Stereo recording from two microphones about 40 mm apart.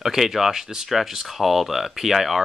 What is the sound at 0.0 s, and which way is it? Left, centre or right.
Speech, centre.